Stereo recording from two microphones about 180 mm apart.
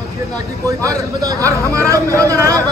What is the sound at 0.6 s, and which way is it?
Speech, 15° right (ahead or behind).